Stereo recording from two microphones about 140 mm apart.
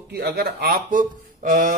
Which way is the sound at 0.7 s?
75° right (ahead or behind).